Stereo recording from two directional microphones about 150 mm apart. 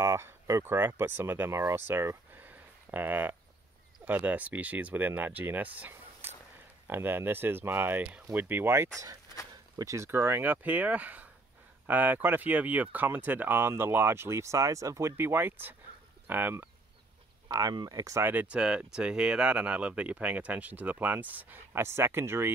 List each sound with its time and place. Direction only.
0.0 s speech: 20° right (ahead or behind)
1.9 s a sound: 15° right (ahead or behind)
4.0 s speech: 10° right (ahead or behind)
17.5 s speech: 25° right (ahead or behind)